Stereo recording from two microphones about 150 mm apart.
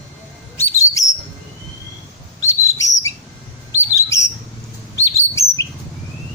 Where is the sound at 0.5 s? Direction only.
20° left (ahead or behind).